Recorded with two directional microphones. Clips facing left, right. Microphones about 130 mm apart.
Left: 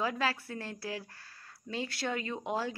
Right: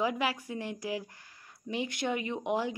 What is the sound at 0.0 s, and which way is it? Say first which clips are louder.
Speech: right 2 dB; 15° right (ahead or behind).